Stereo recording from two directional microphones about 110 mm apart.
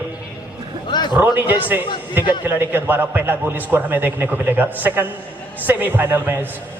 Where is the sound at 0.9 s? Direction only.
40° left (ahead or behind).